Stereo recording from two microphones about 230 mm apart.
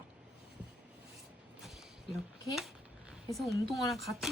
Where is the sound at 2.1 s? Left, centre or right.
Centre.